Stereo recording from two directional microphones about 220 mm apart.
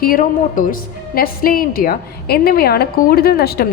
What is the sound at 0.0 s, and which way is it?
A woman's voice, 40° left (ahead or behind).